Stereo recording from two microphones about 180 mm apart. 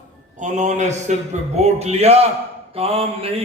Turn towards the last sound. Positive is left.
turn(degrees=-30)  # may be behind; listen again after turning